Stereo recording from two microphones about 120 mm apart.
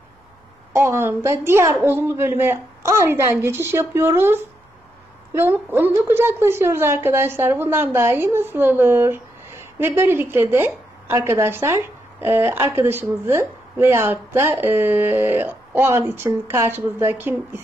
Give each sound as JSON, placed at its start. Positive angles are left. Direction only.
{"t": 0.7, "sound": "a woman's voice", "side_deg": -20}